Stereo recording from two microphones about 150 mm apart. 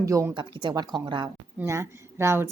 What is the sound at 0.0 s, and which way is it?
Speech, 20° right (ahead or behind).